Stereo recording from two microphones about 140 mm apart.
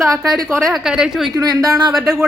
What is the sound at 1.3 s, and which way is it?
Speech, 25° right (ahead or behind).